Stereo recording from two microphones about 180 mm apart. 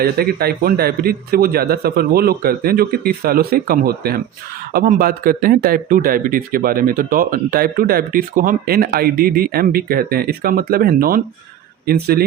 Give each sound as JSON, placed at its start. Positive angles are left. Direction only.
{"t": 0.0, "sound": "speech", "side_deg": -60}